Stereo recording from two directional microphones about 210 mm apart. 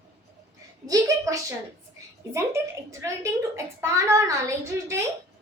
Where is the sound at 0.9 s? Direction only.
15° right (ahead or behind).